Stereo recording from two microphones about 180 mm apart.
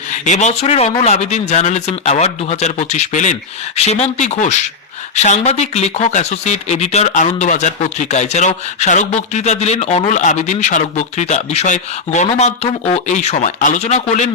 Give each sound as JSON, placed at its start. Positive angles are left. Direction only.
{"t": 0.3, "sound": "speech", "side_deg": 40}